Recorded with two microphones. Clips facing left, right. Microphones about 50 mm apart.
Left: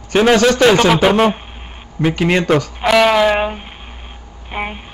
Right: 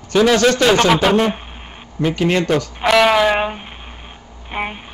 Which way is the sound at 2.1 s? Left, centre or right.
Left.